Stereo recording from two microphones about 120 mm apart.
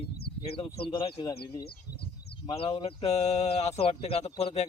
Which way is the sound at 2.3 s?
45° left (ahead or behind).